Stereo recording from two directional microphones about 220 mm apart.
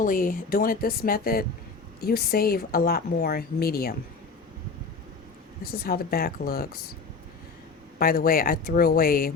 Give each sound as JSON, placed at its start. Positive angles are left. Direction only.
{"t": 0.0, "sound": "a woman's voice", "side_deg": 40}
{"t": 5.6, "sound": "speech", "side_deg": 45}
{"t": 7.9, "sound": "a woman's voice", "side_deg": 40}